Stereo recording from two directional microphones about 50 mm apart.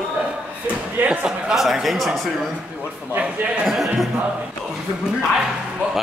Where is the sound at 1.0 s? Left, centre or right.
Centre.